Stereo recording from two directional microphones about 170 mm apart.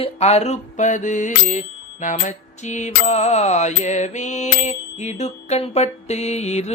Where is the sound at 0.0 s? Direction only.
40° left (ahead or behind).